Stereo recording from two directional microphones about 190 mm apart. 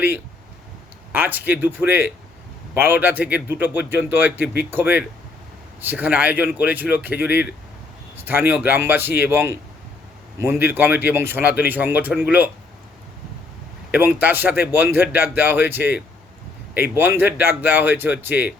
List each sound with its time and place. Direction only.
1.1 s speech: 10° right (ahead or behind)
13.9 s speech: 10° right (ahead or behind)